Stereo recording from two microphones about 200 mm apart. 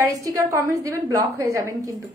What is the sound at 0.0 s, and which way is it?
A woman's voice, 15° right (ahead or behind).